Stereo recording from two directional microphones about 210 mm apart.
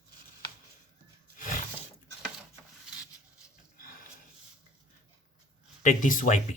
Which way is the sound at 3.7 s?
40° left (ahead or behind).